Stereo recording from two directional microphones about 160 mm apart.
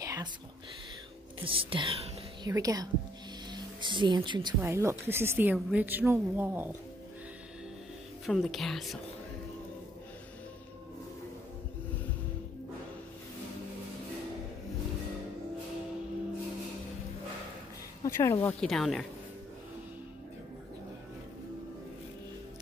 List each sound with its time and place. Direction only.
0.0 s whispering: 20° right (ahead or behind)
1.4 s speech: 35° right (ahead or behind)
2.4 s speech: 25° right (ahead or behind)
4.6 s a woman's voice: 15° right (ahead or behind)
8.3 s speech: centre (ahead or behind)
18.0 s speech: 20° left (ahead or behind)
18.5 s speech: 5° left (ahead or behind)